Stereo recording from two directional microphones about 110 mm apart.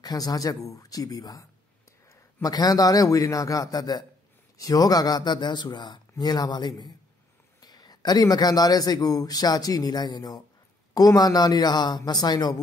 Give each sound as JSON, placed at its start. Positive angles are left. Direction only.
{"t": 0.0, "sound": "a man's voice", "side_deg": 35}